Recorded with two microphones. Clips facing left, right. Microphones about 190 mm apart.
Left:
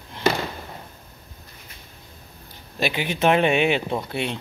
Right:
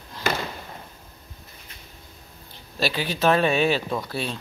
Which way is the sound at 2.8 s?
20° left (ahead or behind).